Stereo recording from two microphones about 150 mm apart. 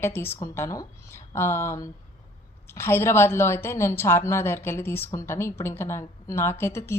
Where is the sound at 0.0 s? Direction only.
15° left (ahead or behind).